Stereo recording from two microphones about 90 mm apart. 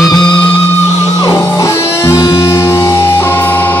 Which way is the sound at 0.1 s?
60° left (ahead or behind).